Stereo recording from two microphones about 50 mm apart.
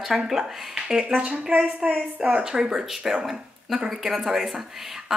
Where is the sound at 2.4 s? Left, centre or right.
Centre.